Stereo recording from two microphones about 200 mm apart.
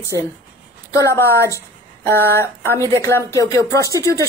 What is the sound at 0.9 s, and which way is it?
Speech, 15° left (ahead or behind).